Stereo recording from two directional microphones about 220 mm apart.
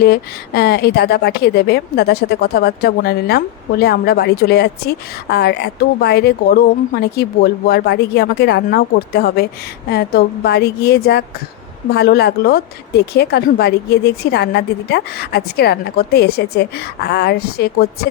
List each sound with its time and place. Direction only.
0.0 s a woman's voice: 45° left (ahead or behind)